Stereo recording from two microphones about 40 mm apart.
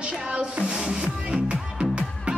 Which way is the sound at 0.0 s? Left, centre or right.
Right.